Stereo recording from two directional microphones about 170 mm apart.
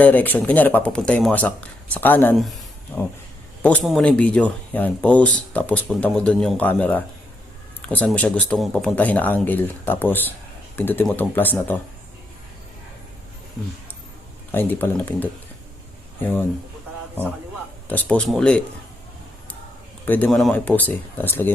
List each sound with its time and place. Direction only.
0.0 s speech: 10° left (ahead or behind)
14.5 s speech: 10° left (ahead or behind)
17.8 s speech: 10° left (ahead or behind)
20.1 s speech: 10° left (ahead or behind)